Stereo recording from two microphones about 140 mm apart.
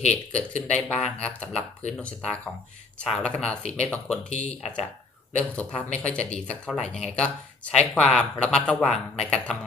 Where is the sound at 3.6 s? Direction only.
50° left (ahead or behind).